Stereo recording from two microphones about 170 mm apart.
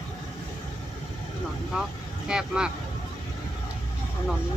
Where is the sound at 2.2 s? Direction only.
5° right (ahead or behind).